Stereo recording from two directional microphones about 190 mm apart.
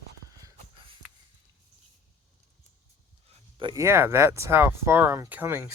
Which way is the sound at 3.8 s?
15° right (ahead or behind).